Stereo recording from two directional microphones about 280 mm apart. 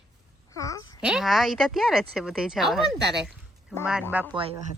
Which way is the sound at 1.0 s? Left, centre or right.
Centre.